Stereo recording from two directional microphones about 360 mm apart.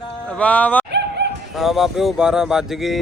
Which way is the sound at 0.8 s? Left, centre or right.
Right.